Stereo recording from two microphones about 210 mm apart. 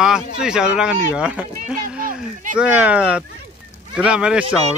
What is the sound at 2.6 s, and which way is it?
A man's voice, 5° right (ahead or behind).